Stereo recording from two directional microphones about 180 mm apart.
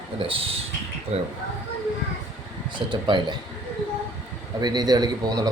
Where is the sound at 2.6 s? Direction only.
25° right (ahead or behind).